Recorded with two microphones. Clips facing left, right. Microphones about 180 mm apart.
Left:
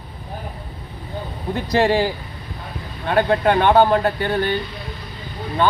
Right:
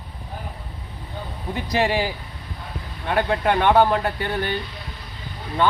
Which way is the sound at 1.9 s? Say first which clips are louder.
Left 5 dB; 10° right (ahead or behind).